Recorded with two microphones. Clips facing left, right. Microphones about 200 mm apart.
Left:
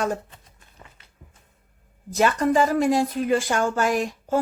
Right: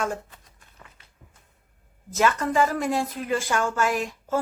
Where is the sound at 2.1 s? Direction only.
35° left (ahead or behind).